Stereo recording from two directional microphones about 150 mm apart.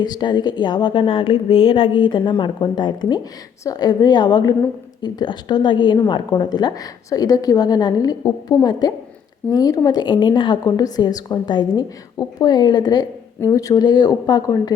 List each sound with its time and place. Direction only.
0.0 s a woman's voice: 30° left (ahead or behind)